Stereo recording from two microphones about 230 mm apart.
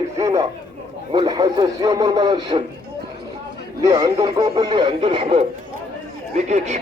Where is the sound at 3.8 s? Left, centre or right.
Centre.